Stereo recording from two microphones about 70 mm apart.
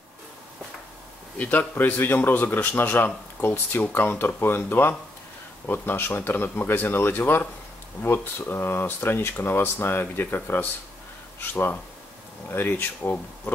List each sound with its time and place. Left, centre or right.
1.4 s speech: left